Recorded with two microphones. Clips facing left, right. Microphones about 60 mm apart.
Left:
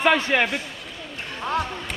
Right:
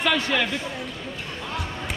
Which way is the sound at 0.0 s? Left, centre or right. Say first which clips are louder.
Left 3 dB; left.